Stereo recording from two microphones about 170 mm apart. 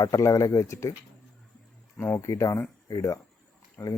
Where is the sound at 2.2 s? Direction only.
20° left (ahead or behind).